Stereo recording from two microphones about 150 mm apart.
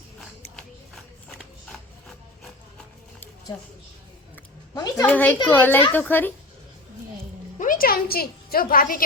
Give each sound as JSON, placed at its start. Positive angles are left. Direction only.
{"t": 0.2, "sound": "a sound", "side_deg": 0}
{"t": 4.7, "sound": "a woman's voice", "side_deg": 25}
{"t": 5.0, "sound": "a woman's voice", "side_deg": 10}
{"t": 7.6, "sound": "a woman's voice", "side_deg": 70}